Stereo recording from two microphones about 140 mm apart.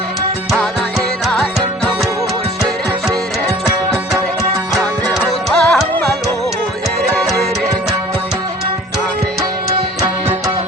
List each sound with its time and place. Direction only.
0.5 s music: centre (ahead or behind)
5.1 s music: centre (ahead or behind)
10.0 s music: 25° right (ahead or behind)